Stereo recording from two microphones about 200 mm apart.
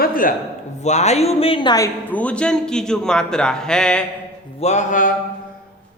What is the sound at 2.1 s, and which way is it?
A man's voice, 5° left (ahead or behind).